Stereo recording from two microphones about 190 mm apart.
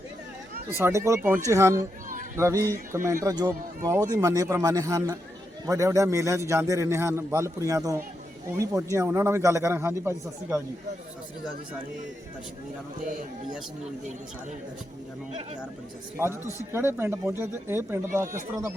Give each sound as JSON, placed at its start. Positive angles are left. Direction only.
{"t": 0.8, "sound": "a man's voice", "side_deg": -15}
{"t": 16.1, "sound": "a man's voice", "side_deg": -15}